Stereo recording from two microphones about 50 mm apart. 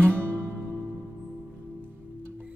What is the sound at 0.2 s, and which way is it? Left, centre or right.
Music, right.